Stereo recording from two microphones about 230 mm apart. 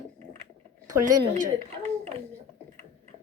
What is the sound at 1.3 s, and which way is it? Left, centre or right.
Speech, right.